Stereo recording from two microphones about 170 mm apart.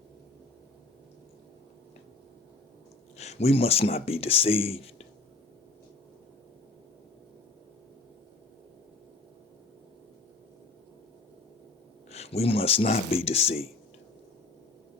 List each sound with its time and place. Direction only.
3.2 s speech: 40° left (ahead or behind)
12.1 s speech: 40° left (ahead or behind)